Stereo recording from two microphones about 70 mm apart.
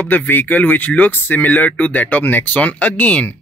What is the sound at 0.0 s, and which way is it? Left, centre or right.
Speech, left.